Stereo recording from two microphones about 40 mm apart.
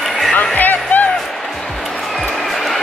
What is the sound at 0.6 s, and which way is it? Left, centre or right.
Music, left.